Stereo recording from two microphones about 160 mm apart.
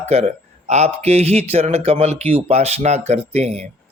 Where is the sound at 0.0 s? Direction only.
45° right (ahead or behind).